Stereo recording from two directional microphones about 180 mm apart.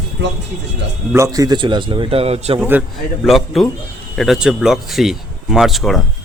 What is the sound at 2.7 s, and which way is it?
Speech, 5° right (ahead or behind).